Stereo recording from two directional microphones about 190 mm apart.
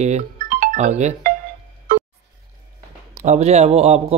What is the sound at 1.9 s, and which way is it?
Music, 45° right (ahead or behind).